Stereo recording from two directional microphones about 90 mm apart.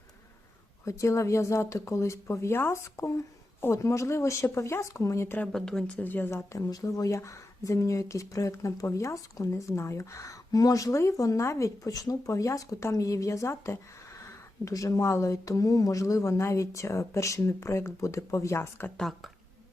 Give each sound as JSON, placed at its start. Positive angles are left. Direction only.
{"t": 0.9, "sound": "speech", "side_deg": 35}
{"t": 5.4, "sound": "speech", "side_deg": 10}
{"t": 6.0, "sound": "speech", "side_deg": 20}
{"t": 18.9, "sound": "speech", "side_deg": 0}